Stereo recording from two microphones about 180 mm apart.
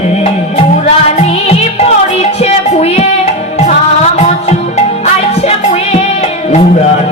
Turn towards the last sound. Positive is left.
turn(degrees=35)  # may be behind; listen again after turning